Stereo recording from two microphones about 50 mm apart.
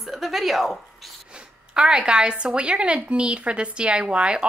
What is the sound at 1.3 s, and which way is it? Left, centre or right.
A woman's voice, centre.